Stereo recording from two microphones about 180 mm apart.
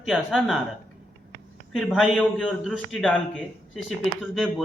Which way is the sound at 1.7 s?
Centre (ahead or behind).